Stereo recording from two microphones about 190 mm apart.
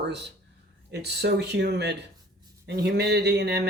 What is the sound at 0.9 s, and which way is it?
Speech, 60° right (ahead or behind).